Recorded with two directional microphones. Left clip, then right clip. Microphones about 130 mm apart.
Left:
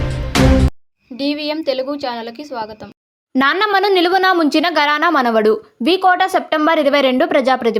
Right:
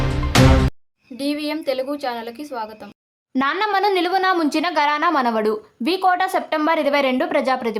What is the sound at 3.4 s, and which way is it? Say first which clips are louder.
A woman's voice: left 5 dB; 35° left (ahead or behind).